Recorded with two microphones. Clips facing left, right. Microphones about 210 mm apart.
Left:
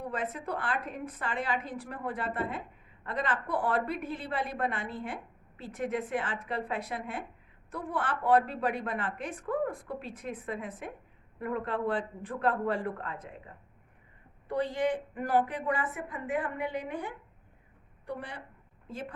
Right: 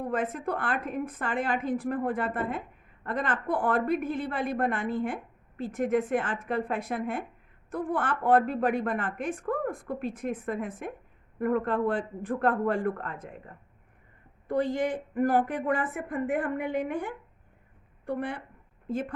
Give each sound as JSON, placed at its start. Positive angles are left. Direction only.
{"t": 0.0, "sound": "a woman's voice", "side_deg": -50}